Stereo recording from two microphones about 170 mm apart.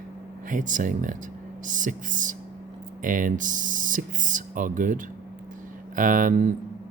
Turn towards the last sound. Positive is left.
turn(degrees=-45)  # may be behind; listen again after turning